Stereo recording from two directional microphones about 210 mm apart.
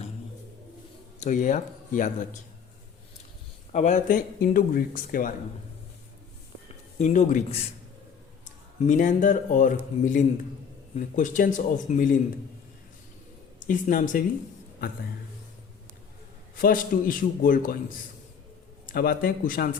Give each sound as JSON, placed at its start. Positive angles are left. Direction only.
{"t": 1.2, "sound": "speech", "side_deg": 35}
{"t": 3.7, "sound": "speech", "side_deg": 35}
{"t": 7.0, "sound": "speech", "side_deg": 35}
{"t": 8.8, "sound": "speech", "side_deg": 35}
{"t": 13.7, "sound": "speech", "side_deg": 40}
{"t": 16.6, "sound": "speech", "side_deg": 40}